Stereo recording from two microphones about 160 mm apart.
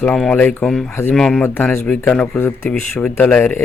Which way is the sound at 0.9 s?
15° left (ahead or behind).